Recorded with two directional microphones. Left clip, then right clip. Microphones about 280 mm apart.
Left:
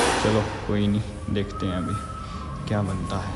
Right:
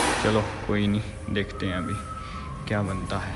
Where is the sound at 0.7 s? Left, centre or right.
Centre.